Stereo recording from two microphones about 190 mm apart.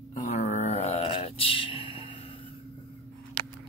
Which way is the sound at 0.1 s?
40° left (ahead or behind).